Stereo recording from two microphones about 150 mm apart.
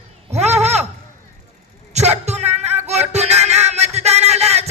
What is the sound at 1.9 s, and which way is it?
Music, 45° right (ahead or behind).